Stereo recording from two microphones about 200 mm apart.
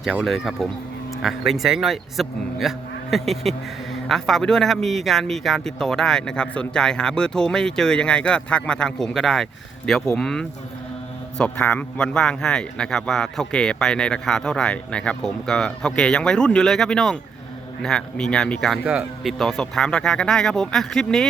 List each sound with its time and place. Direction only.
0.2 s a man's voice: centre (ahead or behind)